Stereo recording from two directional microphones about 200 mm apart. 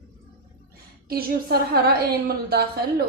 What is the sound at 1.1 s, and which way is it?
A woman's voice, 50° right (ahead or behind).